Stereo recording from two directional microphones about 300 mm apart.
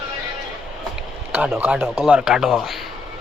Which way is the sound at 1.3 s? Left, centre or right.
Centre.